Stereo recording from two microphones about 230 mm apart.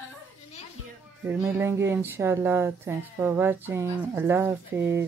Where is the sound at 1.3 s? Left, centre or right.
Centre.